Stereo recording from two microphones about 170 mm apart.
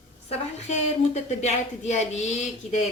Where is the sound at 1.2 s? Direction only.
40° left (ahead or behind).